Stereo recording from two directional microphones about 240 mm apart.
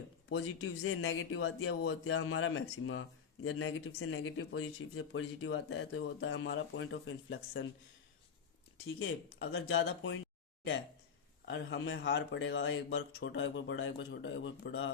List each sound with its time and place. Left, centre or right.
0.3 s speech: left
9.0 s speech: left
11.4 s speech: left